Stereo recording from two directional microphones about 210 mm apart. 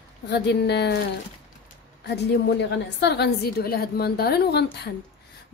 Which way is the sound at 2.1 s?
55° left (ahead or behind).